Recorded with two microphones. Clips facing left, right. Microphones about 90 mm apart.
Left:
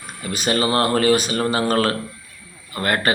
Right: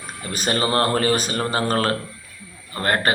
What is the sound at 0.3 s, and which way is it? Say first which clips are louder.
Speech: left 1 dB; 35° right (ahead or behind).